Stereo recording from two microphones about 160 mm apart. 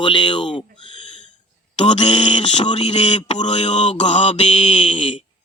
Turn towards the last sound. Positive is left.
turn(degrees=35)  # may be behind; listen again after turning